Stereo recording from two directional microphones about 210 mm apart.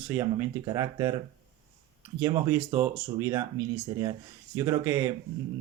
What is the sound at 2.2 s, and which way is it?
Speech, 10° right (ahead or behind).